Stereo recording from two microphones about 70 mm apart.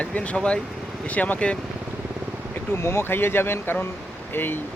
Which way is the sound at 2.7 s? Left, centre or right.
Left.